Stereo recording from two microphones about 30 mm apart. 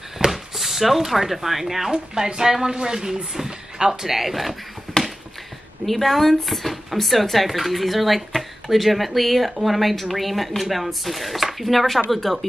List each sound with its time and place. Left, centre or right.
0.3 s speech: centre
2.2 s speech: right; by 4.6 s centre
5.0 s a sound: left
5.9 s speech: centre